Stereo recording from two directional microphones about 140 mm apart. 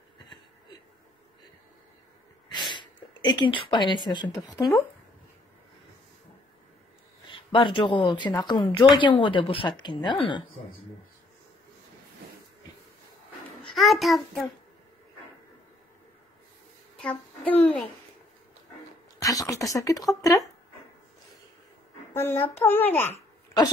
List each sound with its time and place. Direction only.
2.7 s speech: 35° left (ahead or behind)
7.2 s a woman's voice: 35° left (ahead or behind)
13.6 s a child's voice: centre (ahead or behind)
16.9 s a child's voice: 10° left (ahead or behind)
19.1 s speech: 25° left (ahead or behind)
22.1 s a child's voice: 15° left (ahead or behind)